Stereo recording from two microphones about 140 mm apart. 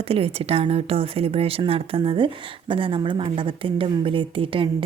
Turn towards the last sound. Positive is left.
turn(degrees=-40)  # may be behind; listen again after turning